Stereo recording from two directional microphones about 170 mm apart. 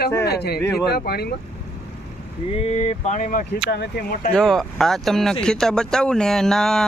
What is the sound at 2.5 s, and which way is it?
Speech, 40° left (ahead or behind).